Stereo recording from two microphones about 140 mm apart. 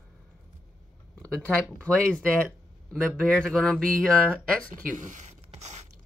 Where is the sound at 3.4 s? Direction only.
5° left (ahead or behind).